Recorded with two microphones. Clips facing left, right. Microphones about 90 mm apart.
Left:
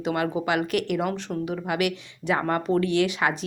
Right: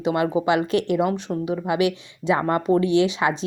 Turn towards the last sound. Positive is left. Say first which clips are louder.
# right 4 dB
turn(degrees=-20)  # may be behind; listen again after turning